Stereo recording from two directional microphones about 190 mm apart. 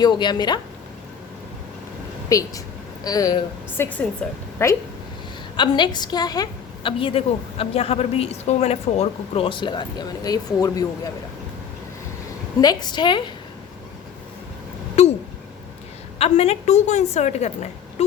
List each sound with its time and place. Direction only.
0.0 s a woman's voice: 25° left (ahead or behind)
2.3 s a woman's voice: 15° left (ahead or behind)
4.2 s a woman's voice: 5° left (ahead or behind)
12.5 s a woman's voice: 20° left (ahead or behind)
15.0 s a sound: 35° left (ahead or behind)
16.1 s a woman's voice: 35° left (ahead or behind)